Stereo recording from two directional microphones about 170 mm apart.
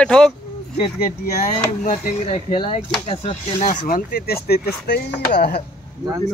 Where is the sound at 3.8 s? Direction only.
60° left (ahead or behind).